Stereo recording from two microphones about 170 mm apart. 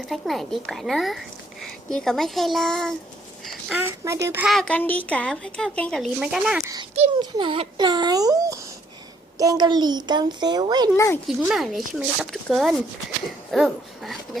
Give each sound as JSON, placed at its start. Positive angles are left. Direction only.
{"t": 0.0, "sound": "a woman's voice", "side_deg": 0}
{"t": 3.4, "sound": "a sound", "side_deg": 0}
{"t": 3.8, "sound": "speech", "side_deg": -15}
{"t": 4.4, "sound": "a woman's voice", "side_deg": 5}
{"t": 7.2, "sound": "speech", "side_deg": -30}
{"t": 10.9, "sound": "speech", "side_deg": 15}
{"t": 11.3, "sound": "a woman's voice", "side_deg": 0}